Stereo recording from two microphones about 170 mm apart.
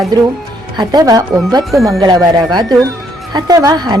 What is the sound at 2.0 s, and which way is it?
Speech, 20° right (ahead or behind).